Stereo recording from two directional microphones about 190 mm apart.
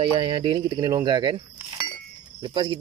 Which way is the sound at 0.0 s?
25° right (ahead or behind).